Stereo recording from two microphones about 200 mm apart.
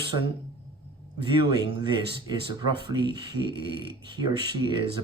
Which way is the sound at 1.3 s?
25° right (ahead or behind).